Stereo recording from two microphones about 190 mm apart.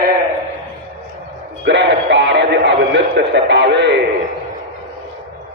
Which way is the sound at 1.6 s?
65° right (ahead or behind).